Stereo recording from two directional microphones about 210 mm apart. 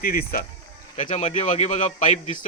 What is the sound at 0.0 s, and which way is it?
Speech, 45° left (ahead or behind).